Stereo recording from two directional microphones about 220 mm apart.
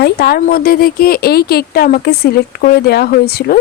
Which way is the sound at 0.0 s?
45° left (ahead or behind).